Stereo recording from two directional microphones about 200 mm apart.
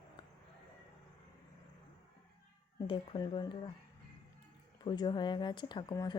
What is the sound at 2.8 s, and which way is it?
Speech, 25° left (ahead or behind).